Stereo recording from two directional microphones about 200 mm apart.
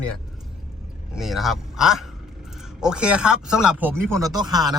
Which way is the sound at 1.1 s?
Centre (ahead or behind).